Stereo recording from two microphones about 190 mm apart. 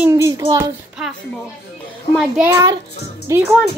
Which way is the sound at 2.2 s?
10° right (ahead or behind).